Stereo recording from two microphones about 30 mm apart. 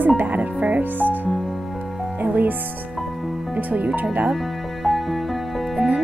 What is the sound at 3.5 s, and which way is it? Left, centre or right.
Speech, right.